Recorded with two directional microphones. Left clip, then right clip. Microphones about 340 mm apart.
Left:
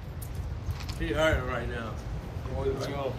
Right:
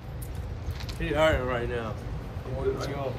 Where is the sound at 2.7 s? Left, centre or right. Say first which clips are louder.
Even; centre.